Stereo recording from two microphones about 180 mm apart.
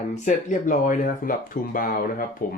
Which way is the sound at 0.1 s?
45° left (ahead or behind).